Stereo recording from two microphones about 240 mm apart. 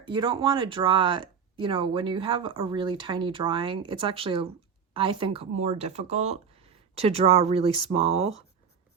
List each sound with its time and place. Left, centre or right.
0.0 s speech: centre